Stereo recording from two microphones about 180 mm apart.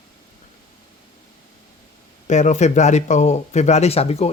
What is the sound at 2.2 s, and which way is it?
Speech, 40° left (ahead or behind).